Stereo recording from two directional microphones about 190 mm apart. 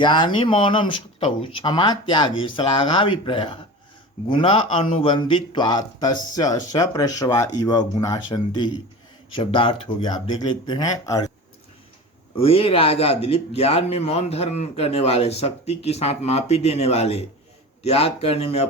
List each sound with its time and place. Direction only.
0.0 s speech: 25° left (ahead or behind)
12.4 s speech: 30° left (ahead or behind)